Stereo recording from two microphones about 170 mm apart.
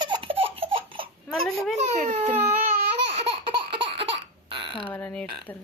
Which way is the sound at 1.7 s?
40° right (ahead or behind).